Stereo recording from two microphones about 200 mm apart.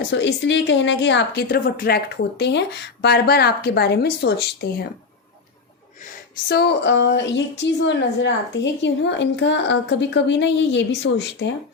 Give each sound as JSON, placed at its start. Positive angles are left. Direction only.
{"t": 0.1, "sound": "a woman's voice", "side_deg": 60}
{"t": 2.4, "sound": "a woman's voice", "side_deg": 60}
{"t": 6.5, "sound": "a woman's voice", "side_deg": 55}